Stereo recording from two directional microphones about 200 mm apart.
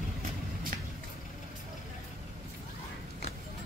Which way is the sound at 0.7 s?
45° right (ahead or behind).